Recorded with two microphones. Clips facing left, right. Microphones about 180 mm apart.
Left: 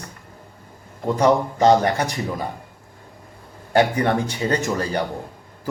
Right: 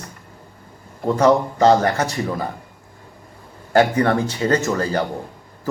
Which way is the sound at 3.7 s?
15° left (ahead or behind).